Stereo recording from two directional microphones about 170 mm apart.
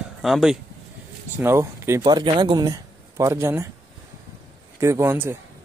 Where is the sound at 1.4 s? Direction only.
15° right (ahead or behind).